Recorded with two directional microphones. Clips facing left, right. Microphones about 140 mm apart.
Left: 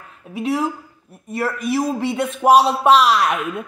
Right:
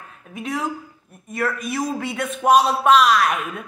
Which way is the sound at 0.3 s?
30° left (ahead or behind).